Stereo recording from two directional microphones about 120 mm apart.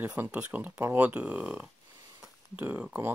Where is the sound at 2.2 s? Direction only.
15° right (ahead or behind).